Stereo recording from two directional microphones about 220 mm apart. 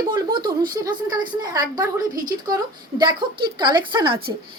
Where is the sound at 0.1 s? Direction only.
20° right (ahead or behind).